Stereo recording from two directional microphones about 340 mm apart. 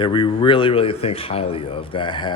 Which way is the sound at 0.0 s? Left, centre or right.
Centre.